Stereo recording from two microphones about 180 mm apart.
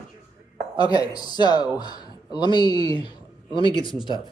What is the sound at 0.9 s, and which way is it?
Speech, 20° left (ahead or behind).